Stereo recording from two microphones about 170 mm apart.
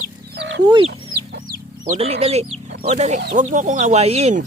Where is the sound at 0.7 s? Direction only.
30° right (ahead or behind).